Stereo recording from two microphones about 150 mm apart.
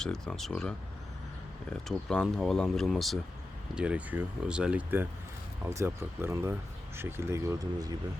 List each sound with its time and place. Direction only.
0.0 s speech: 5° left (ahead or behind)
1.7 s speech: 5° left (ahead or behind); by 7.9 s 25° right (ahead or behind)